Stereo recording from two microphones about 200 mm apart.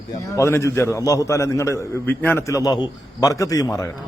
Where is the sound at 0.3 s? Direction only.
15° left (ahead or behind).